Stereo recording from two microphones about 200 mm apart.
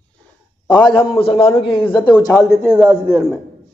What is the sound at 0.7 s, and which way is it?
A man's voice, 25° left (ahead or behind).